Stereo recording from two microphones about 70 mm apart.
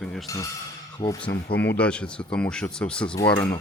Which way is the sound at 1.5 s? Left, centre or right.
Left.